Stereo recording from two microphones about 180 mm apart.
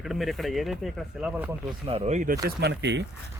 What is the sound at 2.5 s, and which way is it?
Speech, 70° right (ahead or behind).